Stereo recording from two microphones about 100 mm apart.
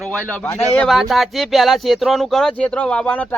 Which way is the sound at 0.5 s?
20° left (ahead or behind).